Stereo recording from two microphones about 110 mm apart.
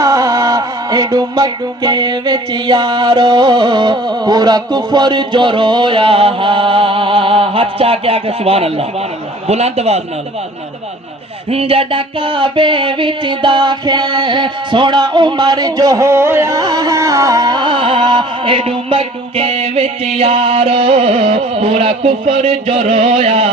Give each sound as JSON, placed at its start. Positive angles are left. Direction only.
{"t": 0.0, "sound": "music", "side_deg": -35}
{"t": 9.5, "sound": "a man's voice", "side_deg": -75}
{"t": 11.5, "sound": "music", "side_deg": -60}
{"t": 16.6, "sound": "music", "side_deg": -40}